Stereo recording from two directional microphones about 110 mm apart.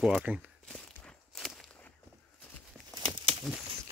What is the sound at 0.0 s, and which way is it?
Speech, 10° right (ahead or behind).